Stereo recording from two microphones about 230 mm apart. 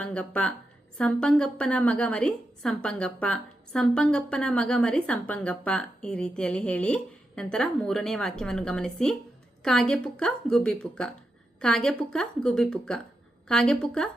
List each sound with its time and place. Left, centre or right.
0.0 s a woman's voice: centre